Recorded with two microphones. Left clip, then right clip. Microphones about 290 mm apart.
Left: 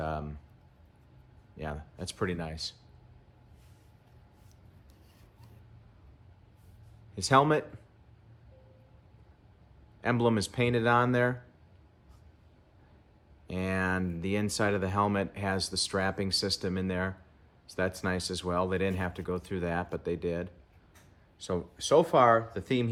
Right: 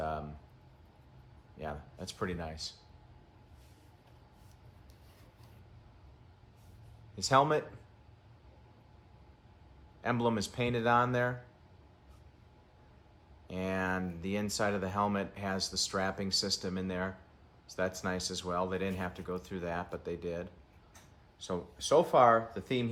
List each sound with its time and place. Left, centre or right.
0.0 s a sound: left
1.5 s a man's voice: left
7.2 s speech: left
10.0 s speech: left
13.5 s speech: left